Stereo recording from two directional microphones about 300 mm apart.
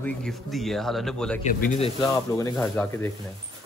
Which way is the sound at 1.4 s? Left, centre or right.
Left.